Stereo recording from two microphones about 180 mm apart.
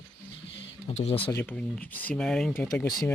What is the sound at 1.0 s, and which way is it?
Speech, 30° left (ahead or behind).